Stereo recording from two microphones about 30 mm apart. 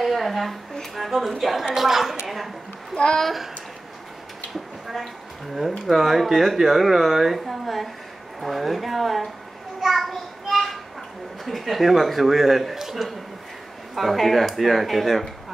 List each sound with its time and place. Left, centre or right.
0.0 s a woman's voice: centre
2.9 s a child's voice: left
5.6 s speech: centre
9.9 s child singing: centre
11.4 s speech: centre